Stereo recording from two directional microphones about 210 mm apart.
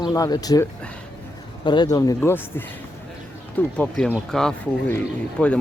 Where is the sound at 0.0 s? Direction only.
20° left (ahead or behind).